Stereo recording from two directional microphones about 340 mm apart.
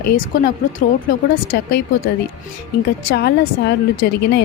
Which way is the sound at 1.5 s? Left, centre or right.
Left.